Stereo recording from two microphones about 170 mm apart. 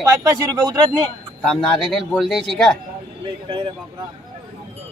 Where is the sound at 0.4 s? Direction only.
20° right (ahead or behind).